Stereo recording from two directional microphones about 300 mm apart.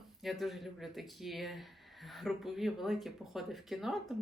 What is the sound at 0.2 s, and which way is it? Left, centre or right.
Speech, centre.